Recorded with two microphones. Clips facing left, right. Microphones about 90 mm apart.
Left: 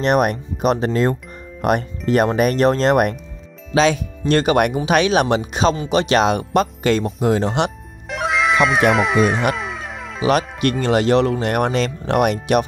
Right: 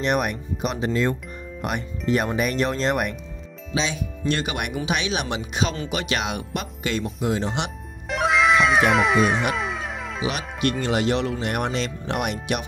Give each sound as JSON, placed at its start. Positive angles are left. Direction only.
{"t": 0.0, "sound": "speech", "side_deg": 45}
{"t": 4.3, "sound": "speech", "side_deg": 45}
{"t": 8.1, "sound": "music", "side_deg": 0}
{"t": 10.2, "sound": "speech", "side_deg": 45}